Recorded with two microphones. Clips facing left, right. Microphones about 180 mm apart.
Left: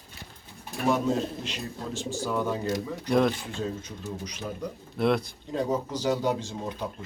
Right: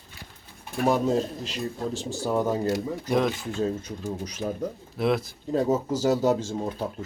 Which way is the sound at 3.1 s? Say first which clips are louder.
Left 1 dB; centre (ahead or behind).